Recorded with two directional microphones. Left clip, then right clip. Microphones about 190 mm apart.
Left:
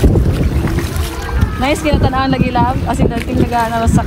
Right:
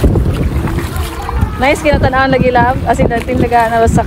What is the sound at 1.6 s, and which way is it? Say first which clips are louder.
Speech: right 4 dB; 35° right (ahead or behind).